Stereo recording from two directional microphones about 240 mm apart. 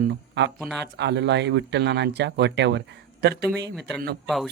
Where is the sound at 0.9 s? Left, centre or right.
Right.